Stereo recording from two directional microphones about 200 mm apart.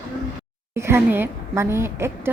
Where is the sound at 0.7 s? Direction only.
10° right (ahead or behind).